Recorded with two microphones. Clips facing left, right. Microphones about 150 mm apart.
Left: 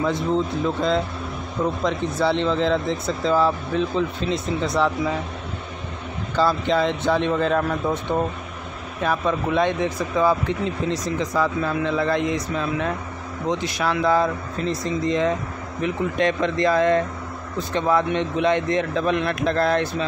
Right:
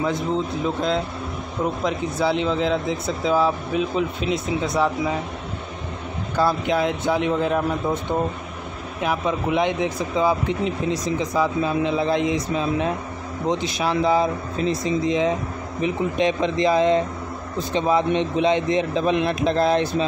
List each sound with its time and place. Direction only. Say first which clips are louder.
0.0 s speech: left 1 dB; centre (ahead or behind)
6.3 s a man's voice: left 1 dB; 10° right (ahead or behind)